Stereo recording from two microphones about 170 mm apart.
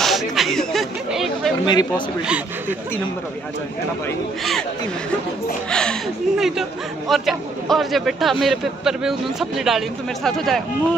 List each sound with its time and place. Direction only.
0.0 s a sound: centre (ahead or behind)
1.7 s speech: 25° left (ahead or behind)
5.7 s a man's voice: 5° left (ahead or behind)